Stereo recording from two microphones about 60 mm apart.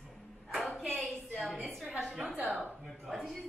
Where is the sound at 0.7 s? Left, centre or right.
Centre.